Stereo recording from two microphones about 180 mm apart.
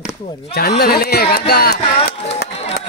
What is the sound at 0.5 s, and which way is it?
Speech, 60° left (ahead or behind).